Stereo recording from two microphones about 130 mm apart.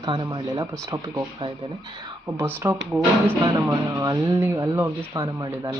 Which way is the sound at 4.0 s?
25° right (ahead or behind).